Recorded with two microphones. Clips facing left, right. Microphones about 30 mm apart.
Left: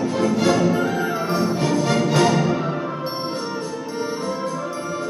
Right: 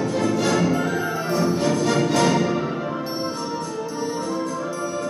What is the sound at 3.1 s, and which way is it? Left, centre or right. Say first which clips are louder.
Music: even; centre.